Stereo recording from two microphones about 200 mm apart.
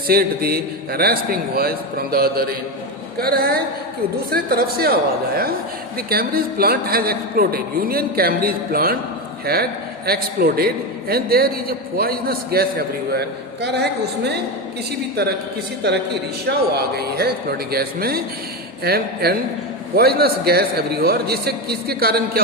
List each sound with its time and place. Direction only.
0.1 s a man's voice: 50° right (ahead or behind)
6.1 s a man's voice: 50° right (ahead or behind)
15.8 s a man's voice: 55° right (ahead or behind)